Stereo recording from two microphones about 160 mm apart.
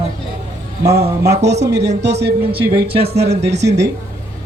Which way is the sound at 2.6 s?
80° right.